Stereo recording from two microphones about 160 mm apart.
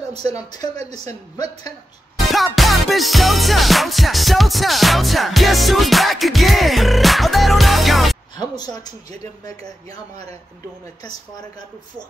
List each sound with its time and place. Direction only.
0.1 s speech: 40° right (ahead or behind)
2.1 s music: centre (ahead or behind)
8.5 s speech: 25° left (ahead or behind)